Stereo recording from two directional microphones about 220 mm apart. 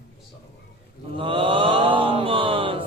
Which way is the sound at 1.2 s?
25° right (ahead or behind).